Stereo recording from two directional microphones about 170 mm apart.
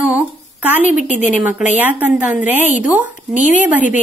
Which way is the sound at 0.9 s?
45° left (ahead or behind).